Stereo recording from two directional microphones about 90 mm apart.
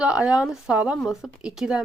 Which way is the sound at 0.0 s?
10° right (ahead or behind).